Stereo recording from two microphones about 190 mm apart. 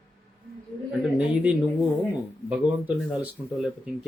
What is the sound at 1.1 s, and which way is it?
Speech, 5° right (ahead or behind).